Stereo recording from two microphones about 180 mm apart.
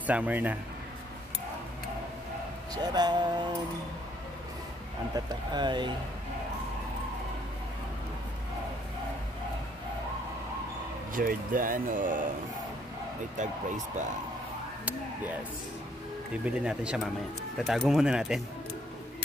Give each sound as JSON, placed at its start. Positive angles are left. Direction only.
{"t": 0.0, "sound": "a man's voice", "side_deg": -10}
{"t": 2.7, "sound": "speech", "side_deg": -25}
{"t": 5.1, "sound": "speech", "side_deg": -20}
{"t": 11.1, "sound": "speech", "side_deg": -50}
{"t": 13.4, "sound": "speech", "side_deg": -45}
{"t": 16.4, "sound": "speech", "side_deg": -5}